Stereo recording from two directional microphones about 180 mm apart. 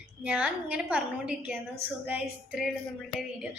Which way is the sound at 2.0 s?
5° right (ahead or behind).